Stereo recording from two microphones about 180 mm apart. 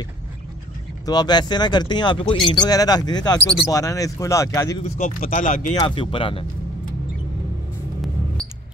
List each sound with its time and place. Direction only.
1.0 s speech: 25° left (ahead or behind)
4.8 s speech: 50° left (ahead or behind)
5.8 s speech: 30° left (ahead or behind)